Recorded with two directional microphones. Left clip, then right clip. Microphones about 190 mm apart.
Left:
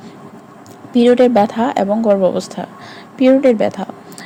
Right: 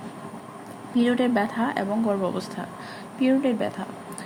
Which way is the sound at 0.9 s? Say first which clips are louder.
Left 13 dB; 35° left (ahead or behind).